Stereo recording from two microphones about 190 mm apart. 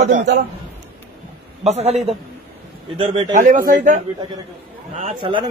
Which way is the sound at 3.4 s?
45° right (ahead or behind).